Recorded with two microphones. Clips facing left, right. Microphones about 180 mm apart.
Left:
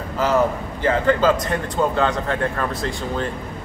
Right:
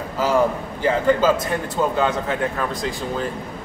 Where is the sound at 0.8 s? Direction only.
10° right (ahead or behind).